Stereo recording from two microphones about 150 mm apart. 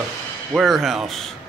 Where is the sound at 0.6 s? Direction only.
Centre (ahead or behind).